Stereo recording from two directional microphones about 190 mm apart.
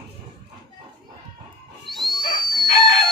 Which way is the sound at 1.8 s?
Centre (ahead or behind).